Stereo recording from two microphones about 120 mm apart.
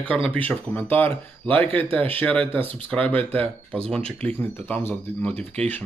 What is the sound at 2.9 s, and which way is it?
Speech, 10° left (ahead or behind).